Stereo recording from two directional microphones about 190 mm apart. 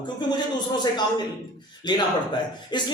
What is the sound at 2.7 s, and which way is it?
Speech, 25° left (ahead or behind).